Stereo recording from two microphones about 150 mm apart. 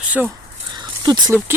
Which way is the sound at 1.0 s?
30° right (ahead or behind).